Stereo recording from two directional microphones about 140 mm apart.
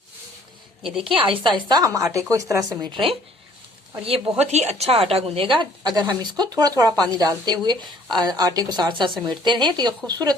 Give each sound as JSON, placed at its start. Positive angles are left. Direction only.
{"t": 1.1, "sound": "speech", "side_deg": -35}
{"t": 4.4, "sound": "a woman's voice", "side_deg": -50}
{"t": 5.5, "sound": "speech", "side_deg": -30}